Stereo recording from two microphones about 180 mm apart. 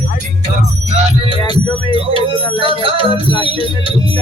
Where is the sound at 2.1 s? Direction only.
30° right (ahead or behind).